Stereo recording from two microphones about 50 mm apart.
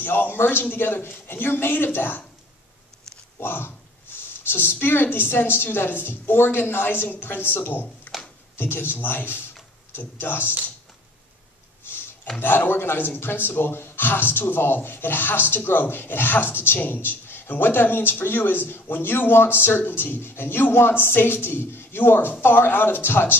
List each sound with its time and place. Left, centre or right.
0.0 s speech: left
3.3 s speech: left
11.8 s a sound: left
12.4 s speech: left